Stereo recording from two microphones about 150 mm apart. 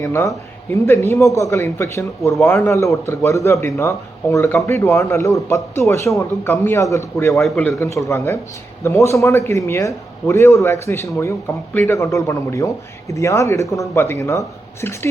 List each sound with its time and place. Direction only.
0.0 s a man's voice: 20° left (ahead or behind)
7.3 s a man's voice: 5° left (ahead or behind)